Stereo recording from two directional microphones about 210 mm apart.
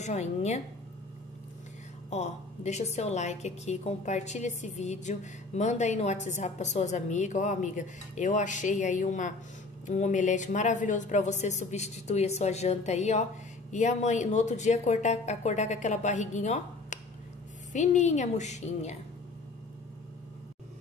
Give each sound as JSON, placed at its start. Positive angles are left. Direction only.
{"t": 0.0, "sound": "a woman's voice", "side_deg": 35}
{"t": 2.0, "sound": "a woman's voice", "side_deg": 30}